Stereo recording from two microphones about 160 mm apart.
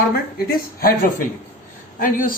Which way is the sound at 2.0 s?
60° left (ahead or behind).